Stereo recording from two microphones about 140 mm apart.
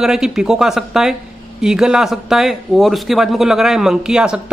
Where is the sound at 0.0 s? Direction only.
Centre (ahead or behind).